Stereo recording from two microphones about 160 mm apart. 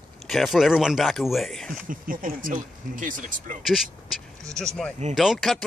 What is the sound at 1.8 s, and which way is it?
Speech, 60° right (ahead or behind).